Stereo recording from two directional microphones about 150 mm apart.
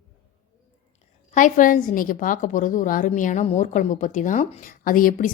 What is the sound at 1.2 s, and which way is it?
Speech, 60° left (ahead or behind).